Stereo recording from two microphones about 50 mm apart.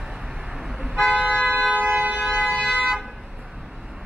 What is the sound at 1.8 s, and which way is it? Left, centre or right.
Siren, right.